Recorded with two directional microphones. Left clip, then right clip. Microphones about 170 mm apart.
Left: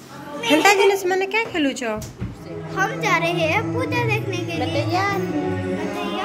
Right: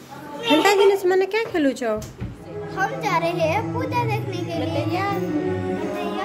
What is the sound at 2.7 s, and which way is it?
A woman's voice, 5° right (ahead or behind).